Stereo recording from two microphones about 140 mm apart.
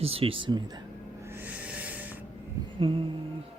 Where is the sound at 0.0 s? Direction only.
45° right (ahead or behind).